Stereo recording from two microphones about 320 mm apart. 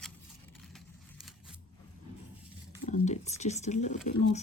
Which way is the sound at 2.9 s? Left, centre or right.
Left.